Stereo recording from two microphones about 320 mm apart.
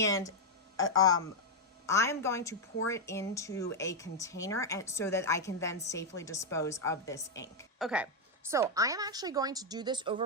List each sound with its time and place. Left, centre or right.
0.0 s speech: centre
7.9 s a woman's voice: centre